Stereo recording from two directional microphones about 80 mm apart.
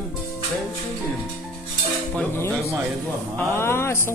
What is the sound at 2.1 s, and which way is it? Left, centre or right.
A woman's voice, left.